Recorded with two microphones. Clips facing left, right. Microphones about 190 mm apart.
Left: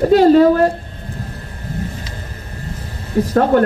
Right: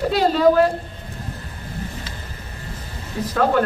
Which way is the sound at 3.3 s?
40° left (ahead or behind).